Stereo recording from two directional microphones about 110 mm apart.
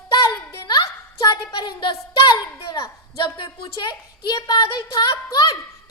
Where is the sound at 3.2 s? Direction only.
50° left (ahead or behind); by 5.9 s 30° left (ahead or behind).